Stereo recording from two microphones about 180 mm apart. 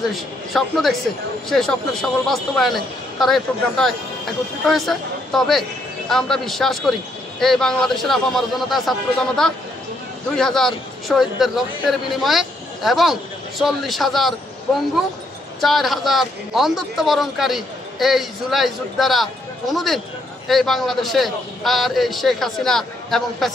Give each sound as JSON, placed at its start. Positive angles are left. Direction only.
{"t": 0.1, "sound": "a man's voice", "side_deg": 0}
{"t": 15.6, "sound": "a man's voice", "side_deg": 0}